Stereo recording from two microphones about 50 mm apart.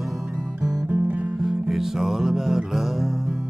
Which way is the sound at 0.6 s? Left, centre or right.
Right.